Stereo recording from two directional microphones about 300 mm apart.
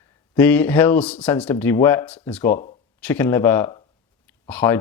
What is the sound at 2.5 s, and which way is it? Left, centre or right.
Speech, left.